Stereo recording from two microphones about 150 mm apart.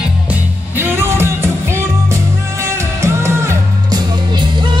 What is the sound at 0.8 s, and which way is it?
Music, 15° right (ahead or behind).